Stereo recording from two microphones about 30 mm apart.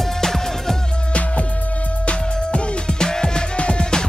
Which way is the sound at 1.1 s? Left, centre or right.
Left.